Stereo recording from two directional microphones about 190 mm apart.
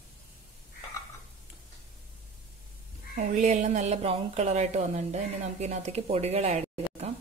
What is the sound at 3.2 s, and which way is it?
A woman's voice, 40° right (ahead or behind).